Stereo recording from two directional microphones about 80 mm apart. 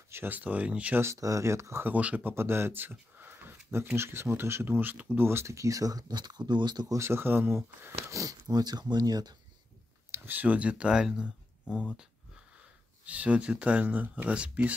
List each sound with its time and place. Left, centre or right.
0.1 s speech: right
1.0 s speech: right
1.9 s speech: centre
2.3 s speech: right
6.9 s speech: right
8.2 s speech: right
10.1 s speech: right
13.0 s speech: centre